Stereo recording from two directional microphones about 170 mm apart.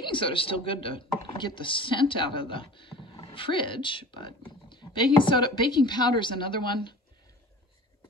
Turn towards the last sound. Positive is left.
turn(degrees=30)  # may be behind; listen again after turning